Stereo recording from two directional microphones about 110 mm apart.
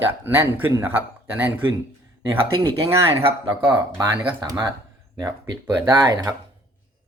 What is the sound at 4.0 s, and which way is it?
Speech, 40° right (ahead or behind).